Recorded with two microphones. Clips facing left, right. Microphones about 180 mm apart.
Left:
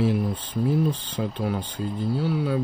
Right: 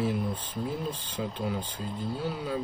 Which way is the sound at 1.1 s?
70° left (ahead or behind).